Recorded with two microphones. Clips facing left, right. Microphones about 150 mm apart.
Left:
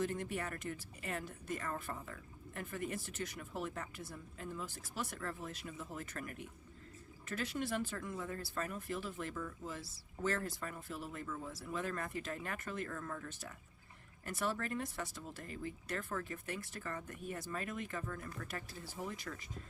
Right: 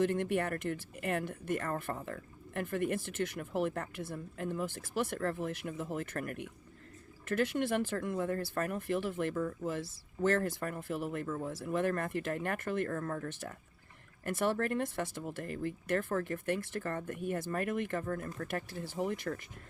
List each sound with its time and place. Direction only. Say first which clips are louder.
0.0 s speech: right 8 dB; 65° right (ahead or behind)